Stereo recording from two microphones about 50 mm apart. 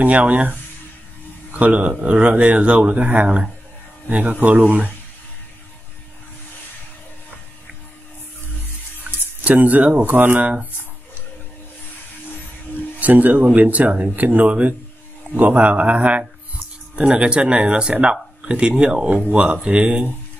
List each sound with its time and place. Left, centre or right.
0.0 s speech: right
9.4 s speech: right
10.4 s speech: right
13.0 s speech: right